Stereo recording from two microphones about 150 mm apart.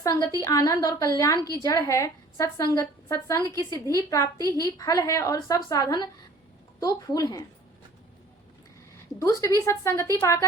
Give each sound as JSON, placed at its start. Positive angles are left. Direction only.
{"t": 0.0, "sound": "a woman's voice", "side_deg": 25}
{"t": 1.4, "sound": "a woman's voice", "side_deg": -25}
{"t": 1.6, "sound": "a woman's voice", "side_deg": 20}
{"t": 9.1, "sound": "a woman's voice", "side_deg": 20}